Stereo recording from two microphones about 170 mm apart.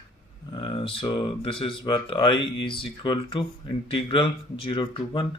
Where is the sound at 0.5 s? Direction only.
30° left (ahead or behind).